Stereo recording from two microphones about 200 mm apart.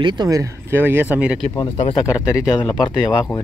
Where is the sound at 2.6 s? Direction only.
20° left (ahead or behind).